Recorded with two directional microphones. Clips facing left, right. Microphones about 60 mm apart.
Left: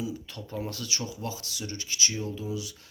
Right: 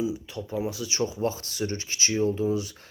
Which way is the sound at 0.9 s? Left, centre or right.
Right.